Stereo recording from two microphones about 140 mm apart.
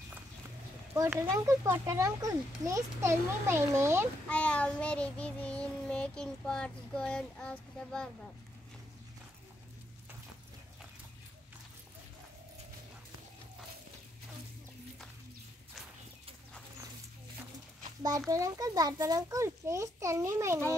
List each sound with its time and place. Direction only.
1.3 s a child's voice: 20° right (ahead or behind)
4.3 s child singing: 10° left (ahead or behind)
18.3 s a child's voice: 25° right (ahead or behind)